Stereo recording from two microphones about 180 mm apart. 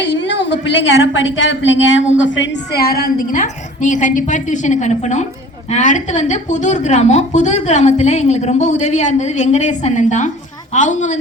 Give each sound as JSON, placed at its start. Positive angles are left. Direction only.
{"t": 0.0, "sound": "a woman's voice", "side_deg": 85}